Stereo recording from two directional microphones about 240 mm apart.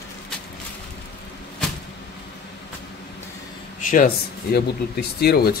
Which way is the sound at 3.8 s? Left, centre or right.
Left.